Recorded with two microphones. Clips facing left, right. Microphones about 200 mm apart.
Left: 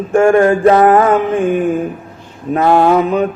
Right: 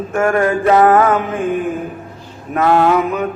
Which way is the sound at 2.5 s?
30° left (ahead or behind).